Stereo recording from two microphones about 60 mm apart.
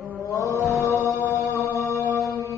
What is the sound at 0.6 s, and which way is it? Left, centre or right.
Music, left.